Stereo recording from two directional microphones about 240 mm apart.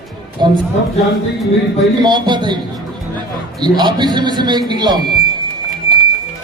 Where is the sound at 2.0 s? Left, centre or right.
Centre.